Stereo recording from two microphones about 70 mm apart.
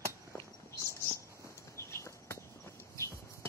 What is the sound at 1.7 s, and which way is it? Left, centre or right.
Walk, left.